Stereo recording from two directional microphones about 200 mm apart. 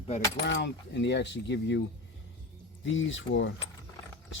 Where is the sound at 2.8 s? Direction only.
70° left (ahead or behind).